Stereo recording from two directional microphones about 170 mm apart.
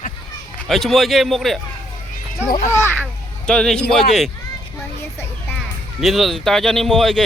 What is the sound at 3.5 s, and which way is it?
Speech, 5° left (ahead or behind).